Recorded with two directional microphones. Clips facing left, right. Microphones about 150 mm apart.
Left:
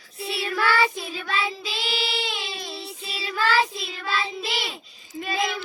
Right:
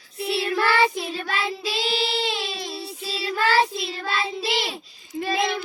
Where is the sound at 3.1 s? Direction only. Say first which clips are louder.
Right 2 dB; 30° right (ahead or behind).